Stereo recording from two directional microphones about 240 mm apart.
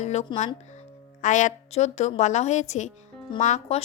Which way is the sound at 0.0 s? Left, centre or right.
Left.